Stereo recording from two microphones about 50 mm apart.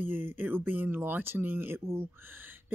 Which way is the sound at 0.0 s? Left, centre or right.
Right.